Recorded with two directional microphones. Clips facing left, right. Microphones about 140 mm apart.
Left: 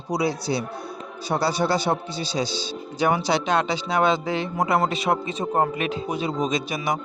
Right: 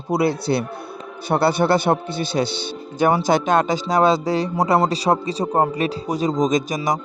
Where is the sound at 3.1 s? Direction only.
45° right (ahead or behind).